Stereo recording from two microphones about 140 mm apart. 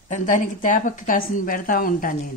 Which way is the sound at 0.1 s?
65° left (ahead or behind).